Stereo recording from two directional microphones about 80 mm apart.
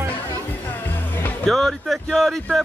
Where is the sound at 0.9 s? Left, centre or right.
Left.